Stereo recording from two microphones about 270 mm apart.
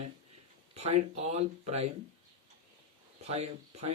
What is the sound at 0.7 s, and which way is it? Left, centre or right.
Speech, right.